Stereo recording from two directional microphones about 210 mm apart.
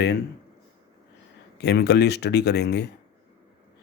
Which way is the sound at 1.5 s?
50° left (ahead or behind).